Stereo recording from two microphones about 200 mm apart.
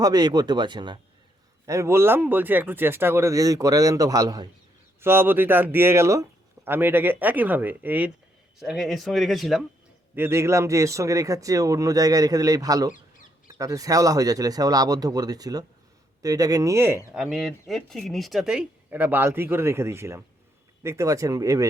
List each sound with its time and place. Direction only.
0.0 s speech: 20° right (ahead or behind); by 9.6 s centre (ahead or behind)
10.2 s speech: 10° right (ahead or behind)
17.2 s speech: centre (ahead or behind)